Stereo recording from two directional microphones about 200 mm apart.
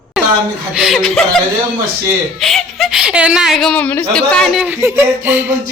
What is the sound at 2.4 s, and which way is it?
A woman's voice, centre (ahead or behind).